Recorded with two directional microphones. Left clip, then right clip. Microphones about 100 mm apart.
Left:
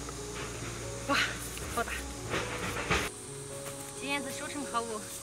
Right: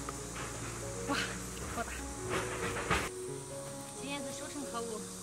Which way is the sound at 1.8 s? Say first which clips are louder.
Left 7 dB; centre (ahead or behind).